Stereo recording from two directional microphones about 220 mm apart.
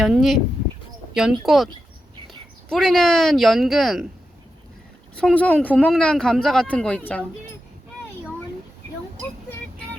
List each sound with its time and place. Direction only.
0.0 s speech: centre (ahead or behind)
5.1 s speech: 5° left (ahead or behind)